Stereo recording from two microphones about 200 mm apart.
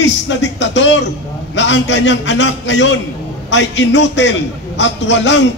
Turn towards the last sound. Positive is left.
turn(degrees=65)  # may be behind; listen again after turning